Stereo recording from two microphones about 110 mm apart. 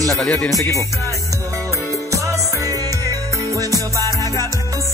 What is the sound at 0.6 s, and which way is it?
Music, 30° left (ahead or behind).